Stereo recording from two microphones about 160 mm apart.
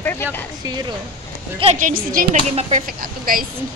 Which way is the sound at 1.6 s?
50° right (ahead or behind).